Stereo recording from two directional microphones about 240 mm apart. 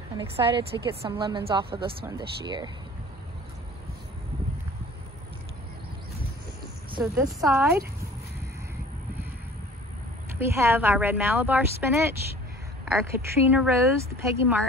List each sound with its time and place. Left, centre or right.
0.2 s a woman's voice: right
7.0 s a woman's voice: centre
10.4 s a woman's voice: centre